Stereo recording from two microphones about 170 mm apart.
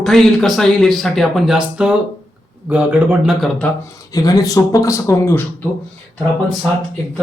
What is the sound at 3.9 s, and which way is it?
A man's voice, 20° left (ahead or behind).